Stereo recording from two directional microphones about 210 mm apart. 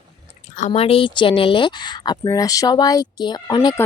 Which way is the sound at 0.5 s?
35° left (ahead or behind).